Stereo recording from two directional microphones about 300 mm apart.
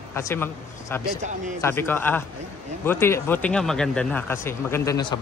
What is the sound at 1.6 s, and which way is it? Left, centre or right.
Speech, centre.